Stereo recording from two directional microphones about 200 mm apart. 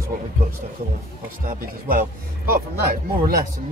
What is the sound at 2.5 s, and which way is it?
Speech, 45° right (ahead or behind).